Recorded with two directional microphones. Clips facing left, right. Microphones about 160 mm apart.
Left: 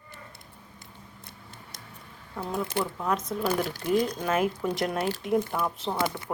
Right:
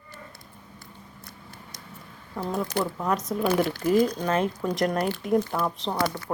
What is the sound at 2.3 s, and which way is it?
Speech, centre (ahead or behind).